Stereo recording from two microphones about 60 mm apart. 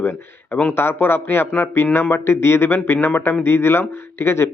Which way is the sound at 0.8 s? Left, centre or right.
Left.